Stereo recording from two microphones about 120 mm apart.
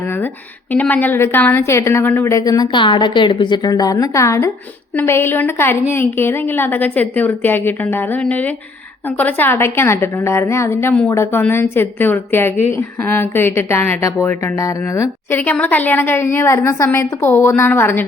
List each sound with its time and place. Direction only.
0.0 s a sound: 20° left (ahead or behind)
0.7 s a woman's voice: 15° left (ahead or behind)
2.3 s a woman's voice: 30° left (ahead or behind)